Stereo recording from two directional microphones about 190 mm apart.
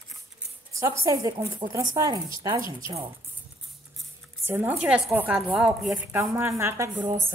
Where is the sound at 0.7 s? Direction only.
15° right (ahead or behind).